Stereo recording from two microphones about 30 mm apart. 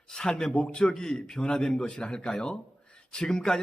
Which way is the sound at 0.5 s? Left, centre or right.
Left.